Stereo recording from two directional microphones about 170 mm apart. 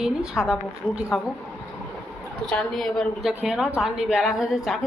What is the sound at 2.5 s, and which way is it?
A woman's voice, 5° left (ahead or behind).